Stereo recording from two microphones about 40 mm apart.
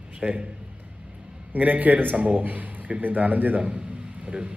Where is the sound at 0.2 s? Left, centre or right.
Right.